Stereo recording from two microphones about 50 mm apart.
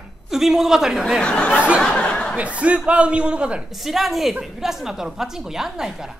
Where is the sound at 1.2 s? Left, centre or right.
Left.